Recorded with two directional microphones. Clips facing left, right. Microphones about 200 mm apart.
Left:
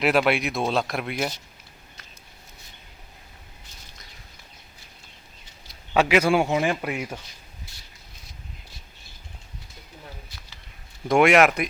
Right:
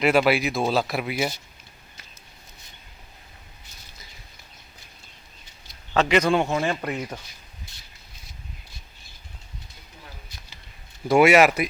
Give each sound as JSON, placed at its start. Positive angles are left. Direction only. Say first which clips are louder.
{"t": 0.0, "sound": "speech", "louder": "right 2 dB", "side_deg": 0}
{"t": 5.9, "sound": "a man's voice", "louder": "left 1 dB", "side_deg": 10}
{"t": 7.7, "sound": "a sound", "louder": "left 1 dB", "side_deg": -20}
{"t": 11.1, "sound": "speech", "louder": "right 1 dB", "side_deg": -5}